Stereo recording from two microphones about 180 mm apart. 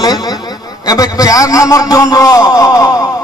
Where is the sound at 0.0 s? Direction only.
20° left (ahead or behind).